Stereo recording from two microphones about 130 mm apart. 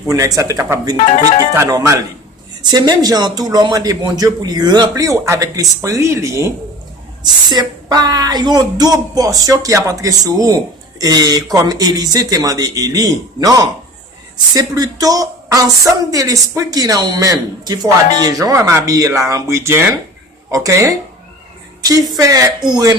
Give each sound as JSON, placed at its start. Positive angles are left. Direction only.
{"t": 0.1, "sound": "speech", "side_deg": -25}
{"t": 1.0, "sound": "speech", "side_deg": 65}
{"t": 1.5, "sound": "speech", "side_deg": -25}
{"t": 21.8, "sound": "a sound", "side_deg": -30}
{"t": 22.1, "sound": "speech", "side_deg": -25}